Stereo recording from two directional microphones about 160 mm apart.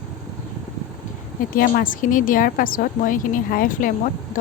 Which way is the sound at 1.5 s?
60° left (ahead or behind).